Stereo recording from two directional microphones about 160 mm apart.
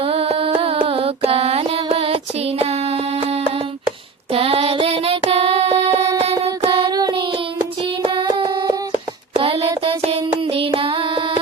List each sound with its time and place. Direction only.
0.0 s music: 40° right (ahead or behind)
2.6 s a sound: 40° right (ahead or behind)
4.3 s child singing: 35° right (ahead or behind)
6.3 s child singing: 25° right (ahead or behind)